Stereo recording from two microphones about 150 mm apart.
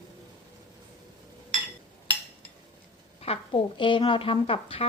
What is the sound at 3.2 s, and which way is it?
Speech, 40° left (ahead or behind).